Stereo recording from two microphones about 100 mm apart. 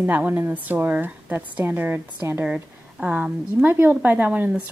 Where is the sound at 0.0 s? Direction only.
20° right (ahead or behind).